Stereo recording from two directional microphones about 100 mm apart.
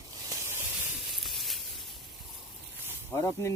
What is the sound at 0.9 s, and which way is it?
Sizzle, centre (ahead or behind).